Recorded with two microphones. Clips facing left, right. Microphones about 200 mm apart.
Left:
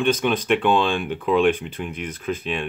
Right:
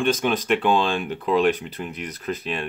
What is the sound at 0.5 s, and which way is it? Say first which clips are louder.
Speech: left 1 dB; 5° right (ahead or behind).